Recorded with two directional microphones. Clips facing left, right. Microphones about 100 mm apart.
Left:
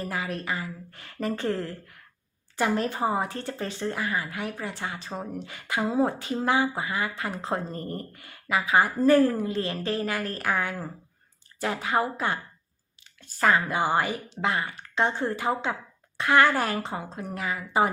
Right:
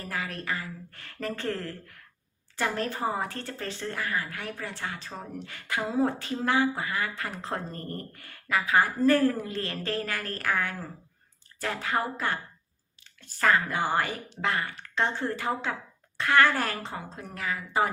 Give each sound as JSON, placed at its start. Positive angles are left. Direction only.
{"t": 0.0, "sound": "a woman's voice", "side_deg": 20}
{"t": 13.4, "sound": "speech", "side_deg": 15}